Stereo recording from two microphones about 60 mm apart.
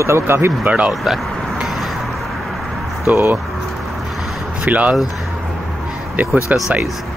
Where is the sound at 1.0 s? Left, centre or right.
Centre.